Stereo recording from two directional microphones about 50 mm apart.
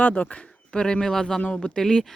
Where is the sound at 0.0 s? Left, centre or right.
Left.